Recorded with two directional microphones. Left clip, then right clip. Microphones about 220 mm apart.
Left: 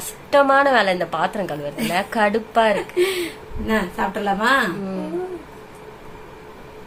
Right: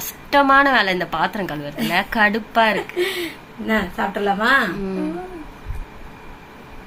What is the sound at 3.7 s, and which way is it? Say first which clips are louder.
Speech: right 1 dB; 20° left (ahead or behind).